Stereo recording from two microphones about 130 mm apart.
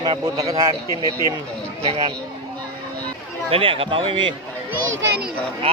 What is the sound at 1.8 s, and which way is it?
Speech, 50° right (ahead or behind).